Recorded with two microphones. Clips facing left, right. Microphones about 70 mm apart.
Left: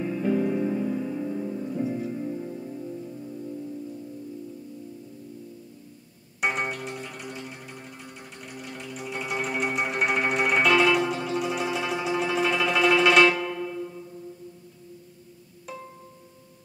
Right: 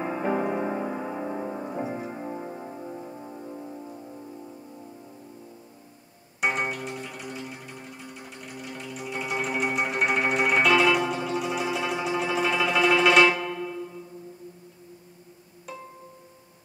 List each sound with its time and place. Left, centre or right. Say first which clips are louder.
0.0 s music: left 1 dB; right
6.4 s music: right 1 dB; centre